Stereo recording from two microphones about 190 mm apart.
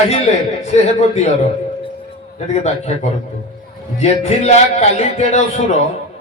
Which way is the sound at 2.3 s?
35° left (ahead or behind).